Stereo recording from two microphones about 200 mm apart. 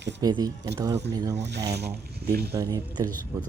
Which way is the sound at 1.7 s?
55° right (ahead or behind).